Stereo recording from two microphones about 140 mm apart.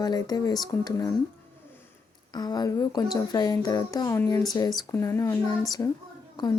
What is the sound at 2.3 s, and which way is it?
Speech, 30° left (ahead or behind).